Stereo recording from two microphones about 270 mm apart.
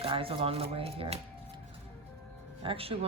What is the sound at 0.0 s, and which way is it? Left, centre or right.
Speech, centre.